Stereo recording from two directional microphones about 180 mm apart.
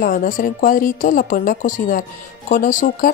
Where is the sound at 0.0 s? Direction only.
50° left (ahead or behind).